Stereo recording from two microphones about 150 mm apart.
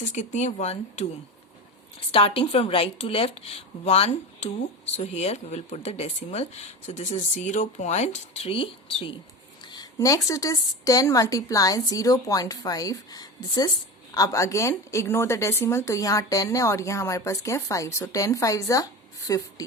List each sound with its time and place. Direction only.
0.0 s speech: 55° left (ahead or behind)
2.1 s speech: 40° left (ahead or behind)
9.6 s a woman's voice: 25° left (ahead or behind)